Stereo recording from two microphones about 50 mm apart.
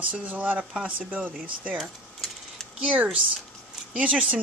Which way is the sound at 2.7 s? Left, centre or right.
Right.